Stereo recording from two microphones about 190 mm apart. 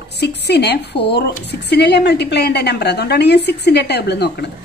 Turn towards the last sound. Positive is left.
turn(degrees=60)  # may be behind; listen again after turning